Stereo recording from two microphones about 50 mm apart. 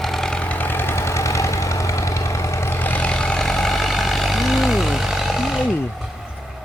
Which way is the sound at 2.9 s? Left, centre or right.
Left.